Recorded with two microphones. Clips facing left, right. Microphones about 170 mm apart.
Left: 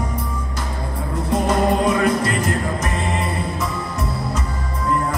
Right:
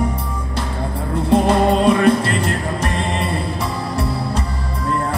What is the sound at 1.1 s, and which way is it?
Music, 30° right (ahead or behind).